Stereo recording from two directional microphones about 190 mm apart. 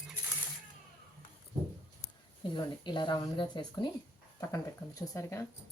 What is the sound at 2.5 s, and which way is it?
A woman's voice, 25° left (ahead or behind).